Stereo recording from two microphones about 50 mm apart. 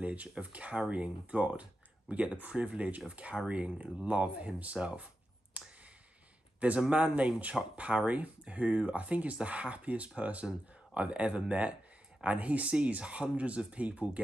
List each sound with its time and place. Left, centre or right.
0.0 s speech: right
5.5 s a sound: right
6.9 s speech: right